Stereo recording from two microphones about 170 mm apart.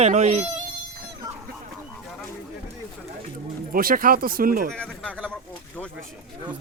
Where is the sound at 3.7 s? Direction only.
55° right (ahead or behind).